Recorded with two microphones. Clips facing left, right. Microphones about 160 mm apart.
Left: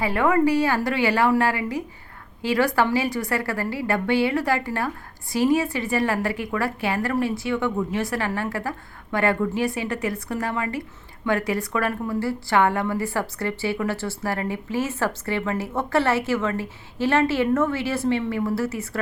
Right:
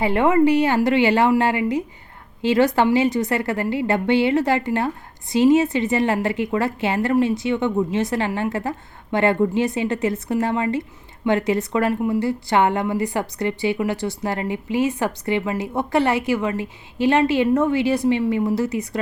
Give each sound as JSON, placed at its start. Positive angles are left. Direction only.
{"t": 0.0, "sound": "a woman's voice", "side_deg": -25}